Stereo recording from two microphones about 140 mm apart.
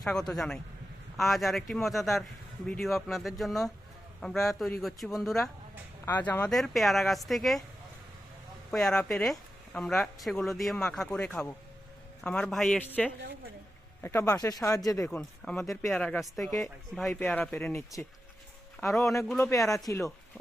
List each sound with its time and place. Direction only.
0.0 s speech: 5° left (ahead or behind)
6.1 s speech: 15° left (ahead or behind)
6.5 s speech: centre (ahead or behind)
8.7 s speech: 5° left (ahead or behind); by 15.2 s 20° left (ahead or behind)
15.4 s speech: centre (ahead or behind)
15.7 s speech: 20° left (ahead or behind)
16.0 s speech: 5° left (ahead or behind)
17.1 s speech: 10° left (ahead or behind)
18.9 s speech: centre (ahead or behind)
19.5 s speech: 25° left (ahead or behind)